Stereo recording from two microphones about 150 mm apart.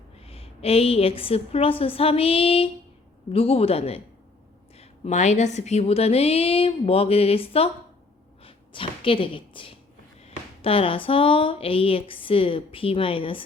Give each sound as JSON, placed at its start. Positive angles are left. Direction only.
{"t": 0.2, "sound": "speech", "side_deg": 40}